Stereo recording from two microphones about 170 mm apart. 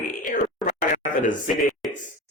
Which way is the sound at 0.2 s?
50° left (ahead or behind).